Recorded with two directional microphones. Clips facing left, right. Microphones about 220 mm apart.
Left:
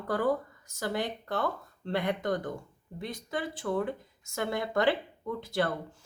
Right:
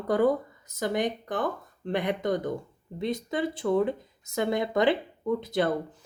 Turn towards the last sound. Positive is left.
turn(degrees=-20)  # may be behind; listen again after turning